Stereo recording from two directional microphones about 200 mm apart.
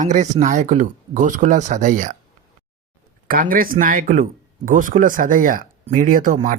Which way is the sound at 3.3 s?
45° right (ahead or behind).